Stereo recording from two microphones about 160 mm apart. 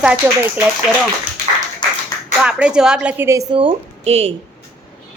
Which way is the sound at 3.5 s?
35° right (ahead or behind).